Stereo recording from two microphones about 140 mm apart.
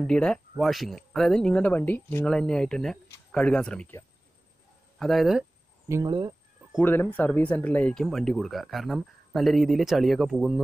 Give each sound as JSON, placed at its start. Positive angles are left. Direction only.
{"t": 0.0, "sound": "speech", "side_deg": 5}
{"t": 4.9, "sound": "speech", "side_deg": 0}
{"t": 6.0, "sound": "speech", "side_deg": -30}
{"t": 6.8, "sound": "speech", "side_deg": 15}